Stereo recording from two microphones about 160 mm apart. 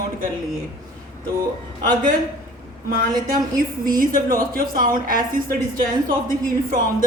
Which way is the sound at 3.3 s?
60° right (ahead or behind).